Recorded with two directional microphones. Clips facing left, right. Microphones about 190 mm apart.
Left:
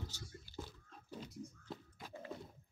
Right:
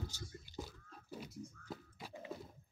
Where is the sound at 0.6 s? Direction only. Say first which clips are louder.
Right 1 dB; 10° right (ahead or behind).